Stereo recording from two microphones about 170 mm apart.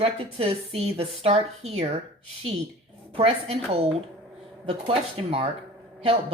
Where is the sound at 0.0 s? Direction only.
35° right (ahead or behind).